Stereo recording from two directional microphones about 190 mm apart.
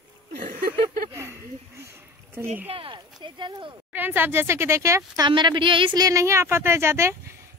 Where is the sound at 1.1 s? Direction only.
10° right (ahead or behind).